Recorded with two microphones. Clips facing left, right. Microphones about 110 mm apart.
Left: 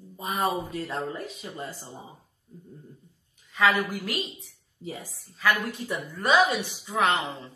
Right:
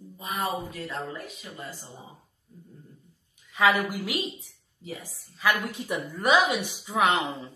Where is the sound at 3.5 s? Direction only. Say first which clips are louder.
Right 1 dB; 10° right (ahead or behind).